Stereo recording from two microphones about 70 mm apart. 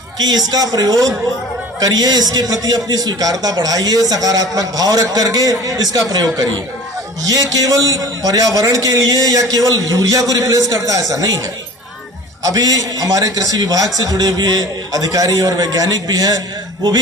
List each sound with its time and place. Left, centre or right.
0.2 s a man's voice: right
12.4 s a man's voice: right
14.9 s a man's voice: right